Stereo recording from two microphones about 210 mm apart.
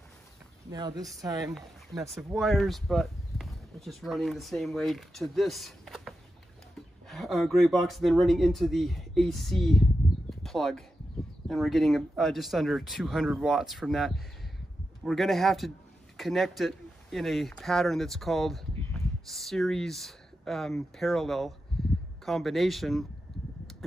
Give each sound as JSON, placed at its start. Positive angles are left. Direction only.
{"t": 0.7, "sound": "speech", "side_deg": -20}
{"t": 2.0, "sound": "speech", "side_deg": 0}